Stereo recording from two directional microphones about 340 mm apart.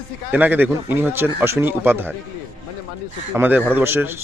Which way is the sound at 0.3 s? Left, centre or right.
Centre.